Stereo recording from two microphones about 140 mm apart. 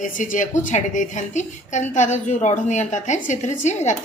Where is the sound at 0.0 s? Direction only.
65° left (ahead or behind).